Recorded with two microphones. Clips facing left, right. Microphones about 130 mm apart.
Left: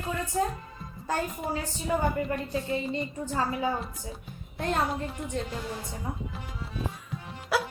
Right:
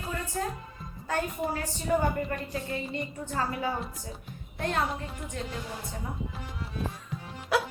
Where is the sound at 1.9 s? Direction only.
Centre (ahead or behind).